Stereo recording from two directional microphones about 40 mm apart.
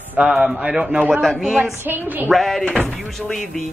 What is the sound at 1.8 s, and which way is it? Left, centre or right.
Speech, right.